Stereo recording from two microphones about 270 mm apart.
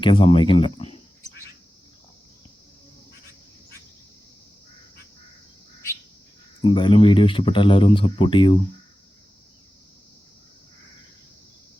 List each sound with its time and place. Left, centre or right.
0.0 s speech: centre
6.6 s speech: centre